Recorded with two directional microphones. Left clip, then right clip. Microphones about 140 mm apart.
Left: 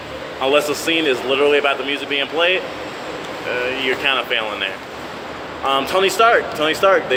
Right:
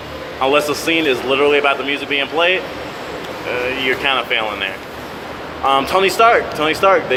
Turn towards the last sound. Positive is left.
turn(degrees=-5)  # may be behind; listen again after turning